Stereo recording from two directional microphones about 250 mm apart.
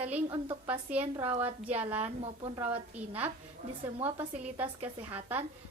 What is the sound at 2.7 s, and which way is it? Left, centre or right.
A woman's voice, centre.